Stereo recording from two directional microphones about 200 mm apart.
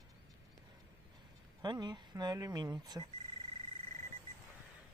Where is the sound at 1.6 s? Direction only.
20° right (ahead or behind).